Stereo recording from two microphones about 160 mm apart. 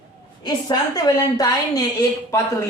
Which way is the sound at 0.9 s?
25° left (ahead or behind).